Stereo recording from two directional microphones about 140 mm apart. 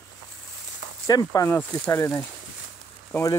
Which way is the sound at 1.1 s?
25° left (ahead or behind).